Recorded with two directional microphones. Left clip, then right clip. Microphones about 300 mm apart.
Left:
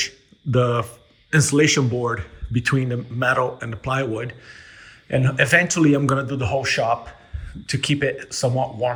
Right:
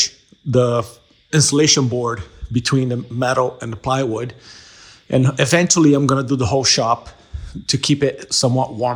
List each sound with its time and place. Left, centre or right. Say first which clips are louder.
0.5 s speech: right 4 dB; centre
8.4 s speech: right 1 dB; right